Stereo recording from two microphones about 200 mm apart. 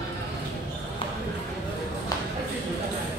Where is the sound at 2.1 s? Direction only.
20° left (ahead or behind).